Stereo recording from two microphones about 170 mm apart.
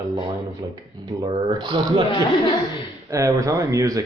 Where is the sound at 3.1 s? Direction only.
20° right (ahead or behind).